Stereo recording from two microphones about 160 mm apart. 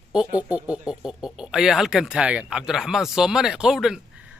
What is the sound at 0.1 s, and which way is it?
Speech, 5° right (ahead or behind).